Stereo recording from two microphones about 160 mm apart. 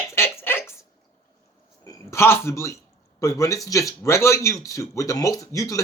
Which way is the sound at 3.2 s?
20° left (ahead or behind).